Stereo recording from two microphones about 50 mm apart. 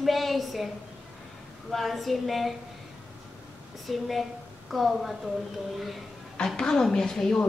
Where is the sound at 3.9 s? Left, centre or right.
Centre.